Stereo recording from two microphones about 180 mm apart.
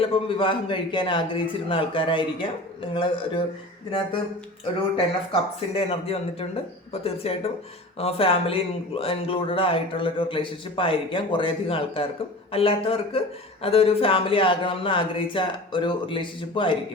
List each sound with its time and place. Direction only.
0.0 s speech: 30° left (ahead or behind)
4.9 s speech: 30° left (ahead or behind)